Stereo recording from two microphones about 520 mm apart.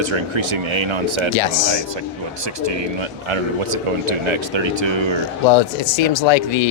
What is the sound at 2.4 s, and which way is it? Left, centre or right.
Speech, right.